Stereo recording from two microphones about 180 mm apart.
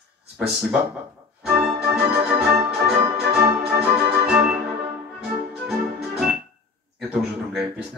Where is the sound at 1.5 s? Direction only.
5° right (ahead or behind).